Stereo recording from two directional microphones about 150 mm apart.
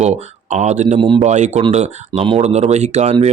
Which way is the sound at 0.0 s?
50° right (ahead or behind).